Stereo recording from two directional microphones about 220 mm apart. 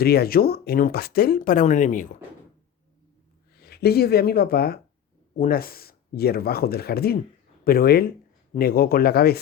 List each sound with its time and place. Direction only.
0.0 s speech: 45° left (ahead or behind)
3.6 s speech: 45° left (ahead or behind)